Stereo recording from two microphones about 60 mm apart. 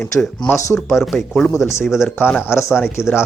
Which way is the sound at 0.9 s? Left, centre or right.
Centre.